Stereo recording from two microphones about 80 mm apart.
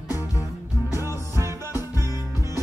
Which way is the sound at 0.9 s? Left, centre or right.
Right.